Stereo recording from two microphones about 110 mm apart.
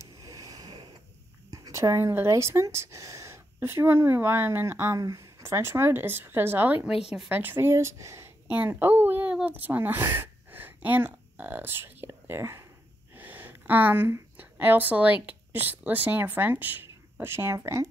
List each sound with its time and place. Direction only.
0.0 s a sound: 30° right (ahead or behind)
1.5 s speech: 30° right (ahead or behind)
6.8 s a woman's voice: 5° right (ahead or behind); by 17.8 s 25° right (ahead or behind)